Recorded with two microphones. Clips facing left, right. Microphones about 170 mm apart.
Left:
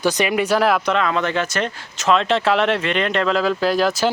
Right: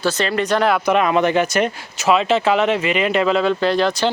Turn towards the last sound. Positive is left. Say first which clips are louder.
# right 1 dB
turn(degrees=5)  # may be behind; listen again after turning